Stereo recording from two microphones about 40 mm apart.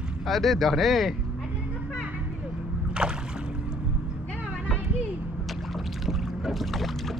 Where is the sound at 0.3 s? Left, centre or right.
Centre.